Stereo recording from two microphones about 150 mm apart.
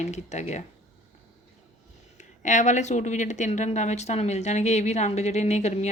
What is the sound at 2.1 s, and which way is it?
Speech, 55° left (ahead or behind).